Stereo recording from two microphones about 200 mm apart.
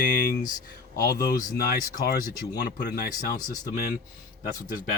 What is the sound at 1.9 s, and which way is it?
Speech, 40° left (ahead or behind).